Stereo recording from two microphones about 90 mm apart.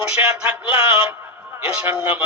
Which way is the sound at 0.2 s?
25° right (ahead or behind).